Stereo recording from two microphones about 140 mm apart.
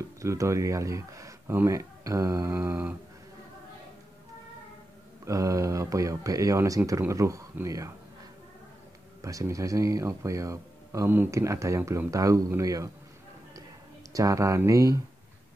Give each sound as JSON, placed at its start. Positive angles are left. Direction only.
{"t": 0.2, "sound": "speech", "side_deg": -20}
{"t": 5.2, "sound": "speech", "side_deg": -25}
{"t": 9.2, "sound": "speech", "side_deg": -20}
{"t": 14.1, "sound": "speech", "side_deg": -25}